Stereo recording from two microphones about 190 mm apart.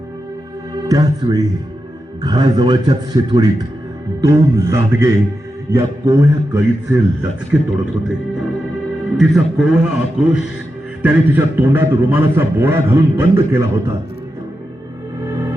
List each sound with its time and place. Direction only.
0.9 s a man's voice: 20° right (ahead or behind)
9.1 s a man's voice: centre (ahead or behind)